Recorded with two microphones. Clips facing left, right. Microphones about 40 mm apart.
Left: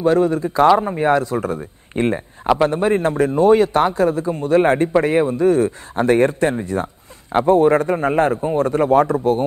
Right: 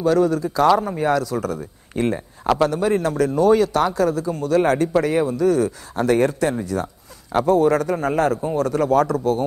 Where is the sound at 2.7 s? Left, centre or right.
Left.